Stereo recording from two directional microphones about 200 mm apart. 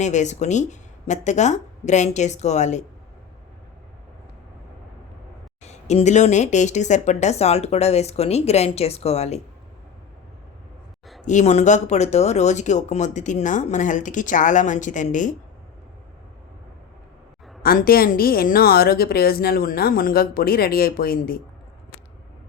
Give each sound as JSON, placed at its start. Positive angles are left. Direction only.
{"t": 0.0, "sound": "speech", "side_deg": 35}
{"t": 5.6, "sound": "speech", "side_deg": 35}
{"t": 11.3, "sound": "speech", "side_deg": 35}
{"t": 17.6, "sound": "a woman's voice", "side_deg": 45}